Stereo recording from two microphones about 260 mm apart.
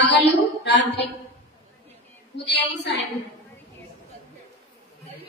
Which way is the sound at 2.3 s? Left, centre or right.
Left.